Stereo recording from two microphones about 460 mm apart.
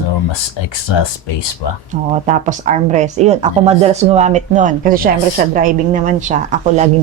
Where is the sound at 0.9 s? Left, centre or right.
Left.